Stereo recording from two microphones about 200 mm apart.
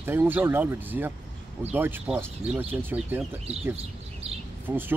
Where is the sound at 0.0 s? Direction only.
10° right (ahead or behind).